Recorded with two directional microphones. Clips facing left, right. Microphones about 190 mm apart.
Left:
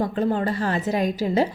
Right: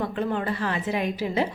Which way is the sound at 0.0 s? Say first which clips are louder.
Left 4 dB; 35° left (ahead or behind).